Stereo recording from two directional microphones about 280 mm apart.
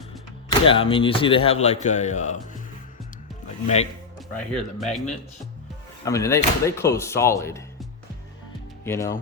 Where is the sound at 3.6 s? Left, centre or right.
Left.